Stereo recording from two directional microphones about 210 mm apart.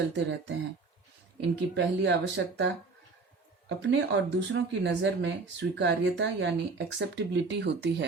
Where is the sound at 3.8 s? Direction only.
60° right (ahead or behind).